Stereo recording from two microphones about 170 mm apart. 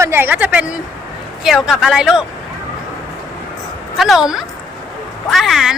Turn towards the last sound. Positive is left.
turn(degrees=0)  # may be behind; listen again after turning